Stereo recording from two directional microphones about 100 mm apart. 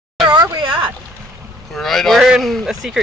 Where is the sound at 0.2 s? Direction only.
50° right (ahead or behind).